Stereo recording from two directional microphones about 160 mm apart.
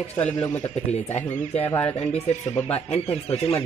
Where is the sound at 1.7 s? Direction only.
10° left (ahead or behind).